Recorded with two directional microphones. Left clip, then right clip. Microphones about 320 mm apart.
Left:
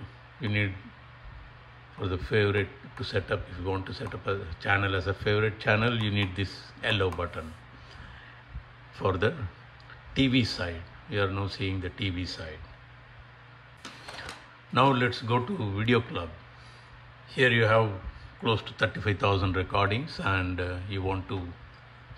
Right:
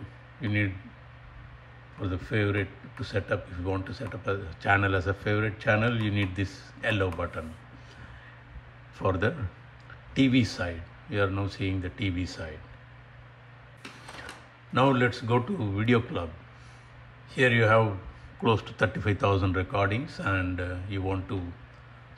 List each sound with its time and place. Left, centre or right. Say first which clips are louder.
0.4 s a man's voice: even; centre
2.0 s speech: left 3 dB; centre
8.9 s a man's voice: even; centre
14.7 s speech: even; centre
17.3 s speech: right 1 dB; centre